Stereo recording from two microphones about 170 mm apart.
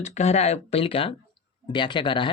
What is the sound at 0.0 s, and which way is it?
Speech, 40° left (ahead or behind).